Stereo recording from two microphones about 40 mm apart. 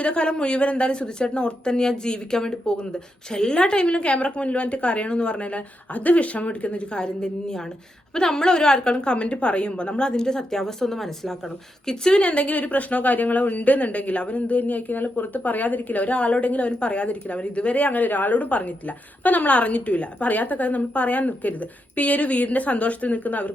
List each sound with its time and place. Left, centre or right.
0.0 s a woman's voice: left; by 11.3 s centre
11.9 s a woman's voice: centre
12.2 s speech: left